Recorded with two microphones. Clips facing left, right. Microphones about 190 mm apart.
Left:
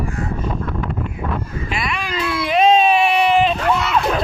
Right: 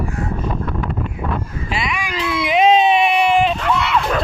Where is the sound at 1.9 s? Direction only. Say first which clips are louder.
Even; 15° right (ahead or behind).